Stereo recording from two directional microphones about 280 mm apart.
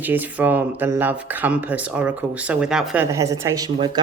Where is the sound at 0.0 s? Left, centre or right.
Centre.